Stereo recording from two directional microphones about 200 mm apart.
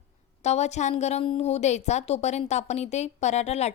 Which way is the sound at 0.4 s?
35° left (ahead or behind).